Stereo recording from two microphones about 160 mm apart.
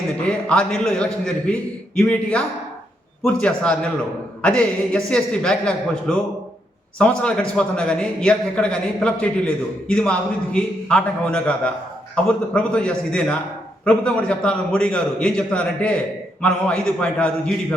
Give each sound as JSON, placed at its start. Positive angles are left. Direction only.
{"t": 0.3, "sound": "a man's voice", "side_deg": 5}
{"t": 3.4, "sound": "a man's voice", "side_deg": 5}